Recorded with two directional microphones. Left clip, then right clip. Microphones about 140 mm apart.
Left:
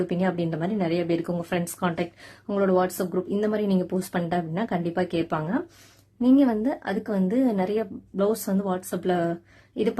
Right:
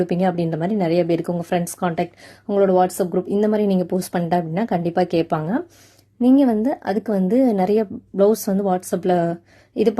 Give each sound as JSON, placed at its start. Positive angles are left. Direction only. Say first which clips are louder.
{"t": 0.0, "sound": "a woman's voice", "louder": "right 6 dB", "side_deg": -40}